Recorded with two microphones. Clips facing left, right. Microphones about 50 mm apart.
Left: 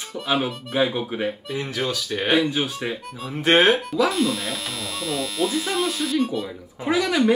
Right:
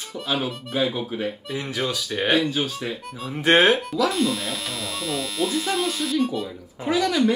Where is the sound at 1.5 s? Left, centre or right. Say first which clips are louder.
Left 1 dB; centre.